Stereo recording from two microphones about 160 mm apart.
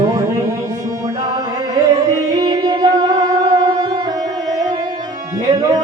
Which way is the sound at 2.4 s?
25° right (ahead or behind).